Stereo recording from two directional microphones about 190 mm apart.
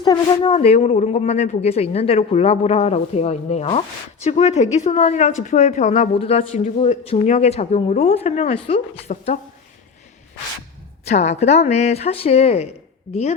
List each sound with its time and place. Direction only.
0.0 s a woman's voice: 20° left (ahead or behind)
0.5 s speech: 35° left (ahead or behind)
11.0 s speech: 35° left (ahead or behind)